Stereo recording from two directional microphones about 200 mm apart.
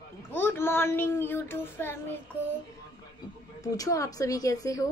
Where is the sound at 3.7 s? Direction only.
15° left (ahead or behind).